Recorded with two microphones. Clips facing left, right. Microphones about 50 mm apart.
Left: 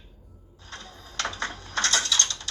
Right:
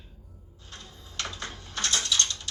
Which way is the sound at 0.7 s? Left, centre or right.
Left.